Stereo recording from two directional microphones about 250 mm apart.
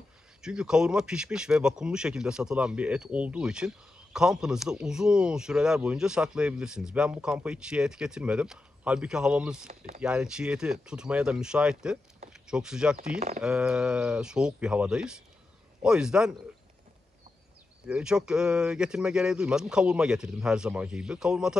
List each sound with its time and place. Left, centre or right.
0.4 s speech: centre
9.7 s speech: right
10.0 s speech: centre
17.8 s speech: centre